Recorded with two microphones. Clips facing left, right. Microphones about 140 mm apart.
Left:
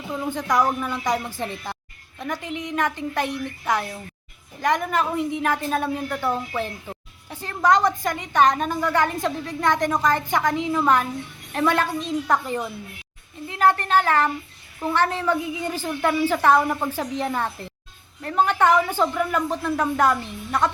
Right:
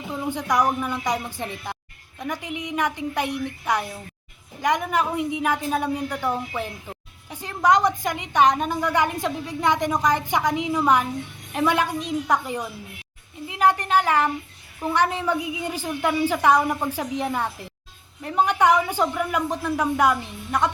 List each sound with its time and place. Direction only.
0.1 s a woman's voice: 10° right (ahead or behind)